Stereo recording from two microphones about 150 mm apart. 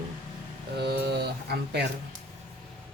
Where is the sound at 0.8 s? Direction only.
90° right.